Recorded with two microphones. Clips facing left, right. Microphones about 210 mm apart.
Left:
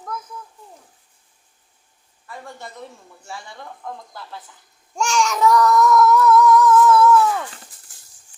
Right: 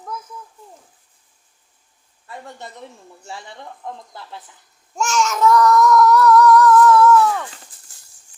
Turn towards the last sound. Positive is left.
turn(degrees=5)  # may be behind; listen again after turning